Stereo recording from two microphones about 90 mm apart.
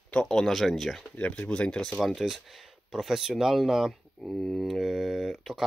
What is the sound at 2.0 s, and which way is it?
Speech, centre (ahead or behind).